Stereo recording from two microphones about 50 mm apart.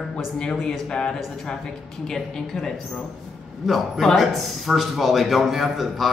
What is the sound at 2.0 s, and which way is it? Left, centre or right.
A woman's voice, centre.